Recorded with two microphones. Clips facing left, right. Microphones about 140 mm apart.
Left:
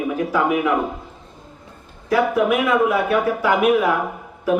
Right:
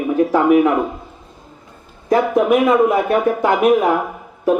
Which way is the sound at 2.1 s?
40° right (ahead or behind).